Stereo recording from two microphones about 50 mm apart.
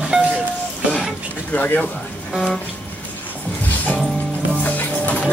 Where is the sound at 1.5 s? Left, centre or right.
Left.